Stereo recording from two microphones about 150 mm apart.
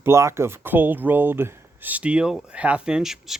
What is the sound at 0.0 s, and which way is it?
Speech, 20° right (ahead or behind).